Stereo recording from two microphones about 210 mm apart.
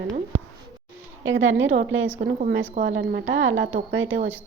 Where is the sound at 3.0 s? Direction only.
60° right (ahead or behind).